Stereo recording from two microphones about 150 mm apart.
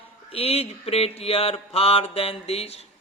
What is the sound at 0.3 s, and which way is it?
Mantra, 40° left (ahead or behind).